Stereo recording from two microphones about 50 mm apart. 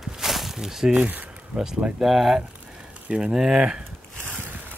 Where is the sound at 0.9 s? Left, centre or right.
Right.